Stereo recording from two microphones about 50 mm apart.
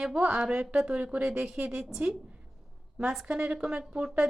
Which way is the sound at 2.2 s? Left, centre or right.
Right.